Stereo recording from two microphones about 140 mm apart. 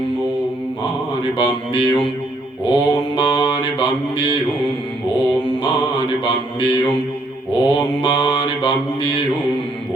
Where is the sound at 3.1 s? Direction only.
40° left (ahead or behind).